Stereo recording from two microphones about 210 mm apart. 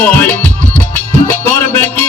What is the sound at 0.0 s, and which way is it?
Music, 10° left (ahead or behind).